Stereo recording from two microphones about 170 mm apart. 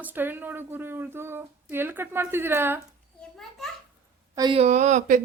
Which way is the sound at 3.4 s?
Centre (ahead or behind).